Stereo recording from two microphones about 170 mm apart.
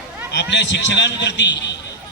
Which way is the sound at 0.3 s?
90° left.